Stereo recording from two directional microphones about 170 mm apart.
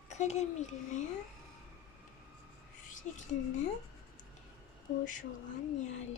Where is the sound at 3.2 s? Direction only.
45° left (ahead or behind).